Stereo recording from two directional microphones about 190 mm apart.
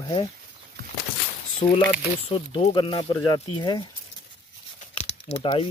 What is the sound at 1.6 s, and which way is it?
Speech, 25° left (ahead or behind).